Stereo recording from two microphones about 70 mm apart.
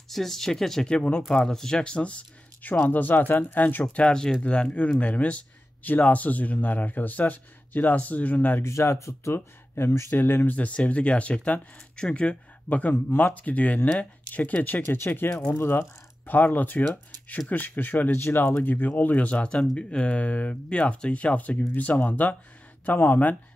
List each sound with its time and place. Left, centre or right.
0.1 s speech: centre; by 8.5 s left
8.5 s speech: left
10.1 s speech: left
15.2 s speech: centre
15.5 s speech: left